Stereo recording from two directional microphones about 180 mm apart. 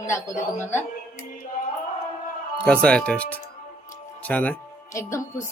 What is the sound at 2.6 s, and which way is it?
Speech, 5° left (ahead or behind).